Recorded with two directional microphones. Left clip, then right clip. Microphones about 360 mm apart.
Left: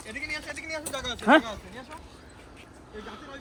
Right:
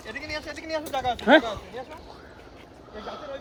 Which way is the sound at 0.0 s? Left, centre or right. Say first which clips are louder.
Right 1 dB; right.